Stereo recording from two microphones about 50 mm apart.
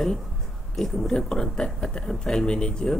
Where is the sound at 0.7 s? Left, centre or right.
Centre.